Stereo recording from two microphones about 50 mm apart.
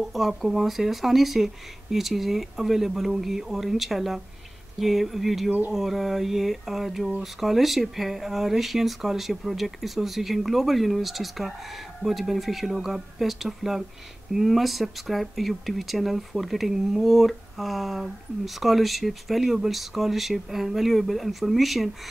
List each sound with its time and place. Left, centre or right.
0.1 s speech: centre